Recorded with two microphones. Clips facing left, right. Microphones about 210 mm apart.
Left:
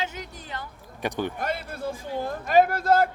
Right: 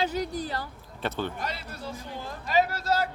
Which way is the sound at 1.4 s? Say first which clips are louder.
Left 6 dB; 50° left (ahead or behind).